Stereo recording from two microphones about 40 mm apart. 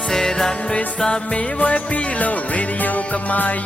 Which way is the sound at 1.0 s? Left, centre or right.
Left.